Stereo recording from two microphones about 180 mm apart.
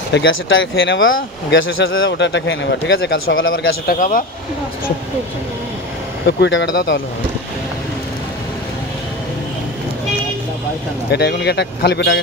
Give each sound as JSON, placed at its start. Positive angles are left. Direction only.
{"t": 0.1, "sound": "speech", "side_deg": 90}
{"t": 6.2, "sound": "speech", "side_deg": 75}
{"t": 11.1, "sound": "speech", "side_deg": 65}